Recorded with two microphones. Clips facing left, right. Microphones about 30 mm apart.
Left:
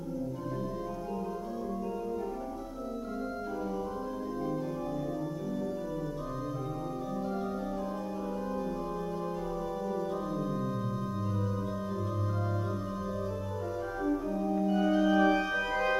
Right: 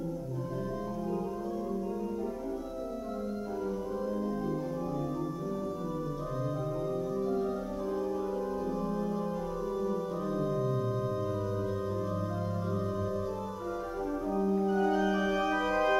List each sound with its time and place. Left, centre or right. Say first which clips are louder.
14.7 s music: left 5 dB; centre
15.7 s music: right 2 dB; centre